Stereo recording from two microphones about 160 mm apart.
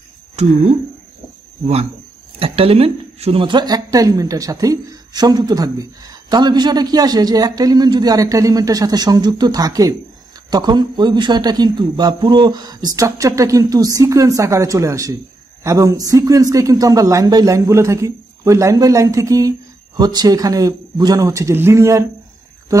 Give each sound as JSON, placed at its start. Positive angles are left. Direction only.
{"t": 0.4, "sound": "speech", "side_deg": -40}
{"t": 2.3, "sound": "speech", "side_deg": -35}